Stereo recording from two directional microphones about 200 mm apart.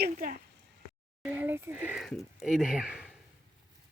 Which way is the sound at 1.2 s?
10° right (ahead or behind).